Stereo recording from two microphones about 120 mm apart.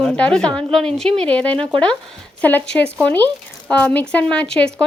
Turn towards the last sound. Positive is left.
turn(degrees=10)  # may be behind; listen again after turning